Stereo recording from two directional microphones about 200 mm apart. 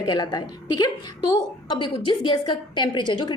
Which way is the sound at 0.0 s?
20° left (ahead or behind).